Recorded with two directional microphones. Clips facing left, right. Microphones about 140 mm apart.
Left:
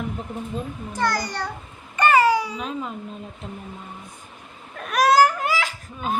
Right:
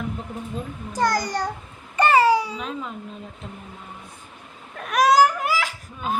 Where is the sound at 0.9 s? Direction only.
45° right (ahead or behind).